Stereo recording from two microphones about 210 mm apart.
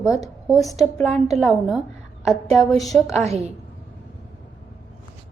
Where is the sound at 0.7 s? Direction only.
15° left (ahead or behind).